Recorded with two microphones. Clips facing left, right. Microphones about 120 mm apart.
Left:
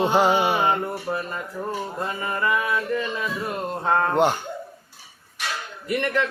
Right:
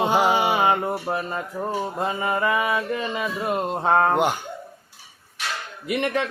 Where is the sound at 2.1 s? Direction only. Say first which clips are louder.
Right 2 dB; 20° right (ahead or behind).